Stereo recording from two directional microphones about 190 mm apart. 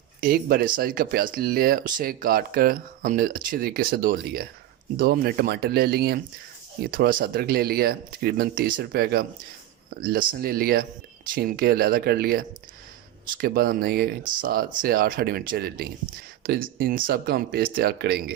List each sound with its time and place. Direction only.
0.2 s speech: 50° right (ahead or behind)